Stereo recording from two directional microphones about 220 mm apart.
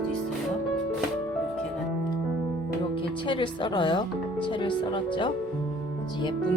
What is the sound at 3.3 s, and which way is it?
Speech, 20° left (ahead or behind).